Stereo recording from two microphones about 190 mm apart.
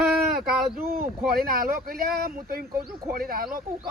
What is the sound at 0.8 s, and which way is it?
Speech, 50° right (ahead or behind).